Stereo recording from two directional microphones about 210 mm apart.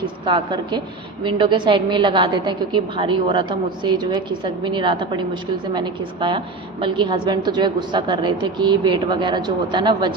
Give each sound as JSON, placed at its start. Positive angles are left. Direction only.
{"t": 0.3, "sound": "a woman's voice", "side_deg": -20}